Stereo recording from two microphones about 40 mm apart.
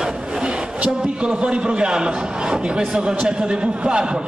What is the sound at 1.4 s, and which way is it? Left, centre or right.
A man's voice, right.